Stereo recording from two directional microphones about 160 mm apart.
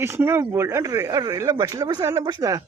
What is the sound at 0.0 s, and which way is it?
Speech, 15° right (ahead or behind).